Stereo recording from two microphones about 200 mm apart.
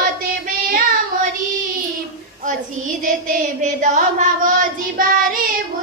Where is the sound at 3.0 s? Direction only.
40° right (ahead or behind).